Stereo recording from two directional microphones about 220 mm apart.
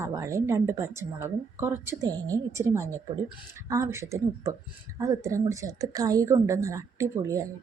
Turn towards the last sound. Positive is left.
turn(degrees=-15)  # may be behind; listen again after turning